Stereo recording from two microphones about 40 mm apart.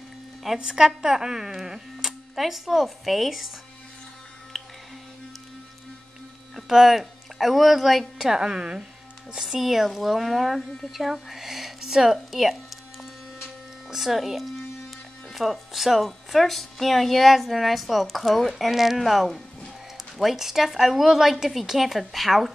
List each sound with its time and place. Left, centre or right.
0.6 s a woman's voice: centre
6.5 s speech: centre
8.3 s speech: centre
9.4 s a woman's voice: centre
13.8 s a woman's voice: centre